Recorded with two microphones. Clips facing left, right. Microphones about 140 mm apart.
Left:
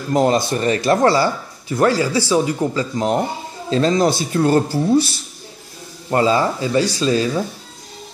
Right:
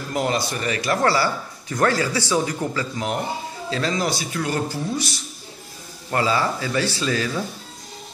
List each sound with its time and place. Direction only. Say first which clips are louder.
0.1 s speech: left 8 dB; 35° left (ahead or behind)